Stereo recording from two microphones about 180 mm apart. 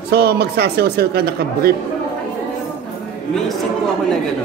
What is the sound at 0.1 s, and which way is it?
Speech, 65° right (ahead or behind).